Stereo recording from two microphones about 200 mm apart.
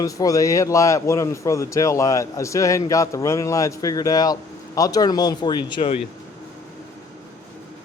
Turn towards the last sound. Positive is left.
turn(degrees=25)  # may be behind; listen again after turning